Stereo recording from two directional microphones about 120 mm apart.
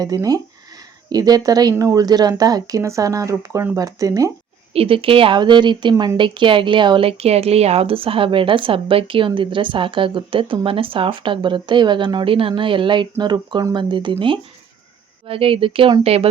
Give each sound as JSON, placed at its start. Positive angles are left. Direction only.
{"t": 0.0, "sound": "speech", "side_deg": -30}
{"t": 4.7, "sound": "speech", "side_deg": -50}